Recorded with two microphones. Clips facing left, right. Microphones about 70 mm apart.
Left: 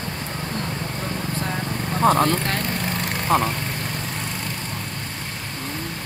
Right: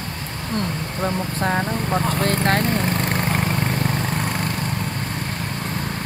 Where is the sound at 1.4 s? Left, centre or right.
Right.